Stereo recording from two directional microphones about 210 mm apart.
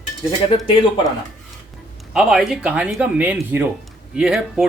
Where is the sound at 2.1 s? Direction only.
5° right (ahead or behind).